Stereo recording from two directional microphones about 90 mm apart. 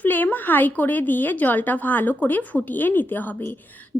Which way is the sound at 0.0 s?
20° left (ahead or behind).